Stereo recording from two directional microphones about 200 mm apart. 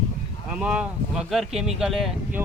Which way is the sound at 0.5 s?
5° right (ahead or behind).